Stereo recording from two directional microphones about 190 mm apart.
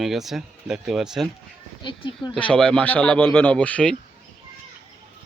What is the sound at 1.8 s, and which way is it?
Speech, 25° left (ahead or behind).